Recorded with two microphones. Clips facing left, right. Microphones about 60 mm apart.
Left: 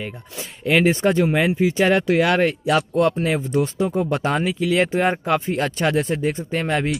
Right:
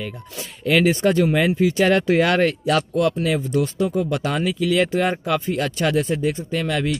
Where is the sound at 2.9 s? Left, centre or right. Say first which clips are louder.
Left 1 dB; left.